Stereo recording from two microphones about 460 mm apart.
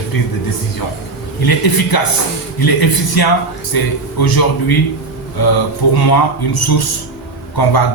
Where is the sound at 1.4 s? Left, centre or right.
Left.